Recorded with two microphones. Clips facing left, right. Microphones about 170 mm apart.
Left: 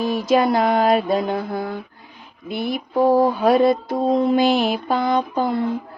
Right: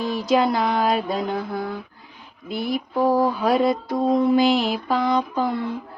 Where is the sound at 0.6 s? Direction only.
50° left (ahead or behind).